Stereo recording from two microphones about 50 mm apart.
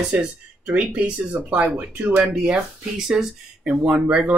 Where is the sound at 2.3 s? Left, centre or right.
Centre.